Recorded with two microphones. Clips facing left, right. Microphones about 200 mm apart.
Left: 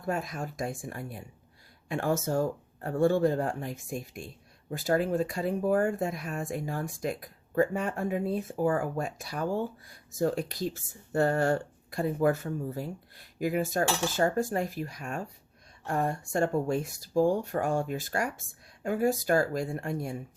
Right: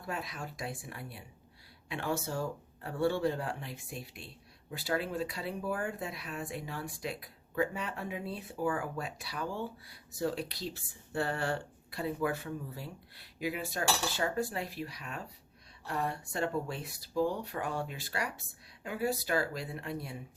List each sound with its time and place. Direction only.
0.0 s speech: 45° left (ahead or behind)